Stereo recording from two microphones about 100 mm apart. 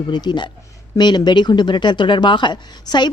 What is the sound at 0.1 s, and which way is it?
Speech, 45° left (ahead or behind).